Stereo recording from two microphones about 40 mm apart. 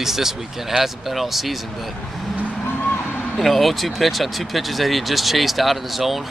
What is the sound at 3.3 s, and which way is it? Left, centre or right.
Speech, centre.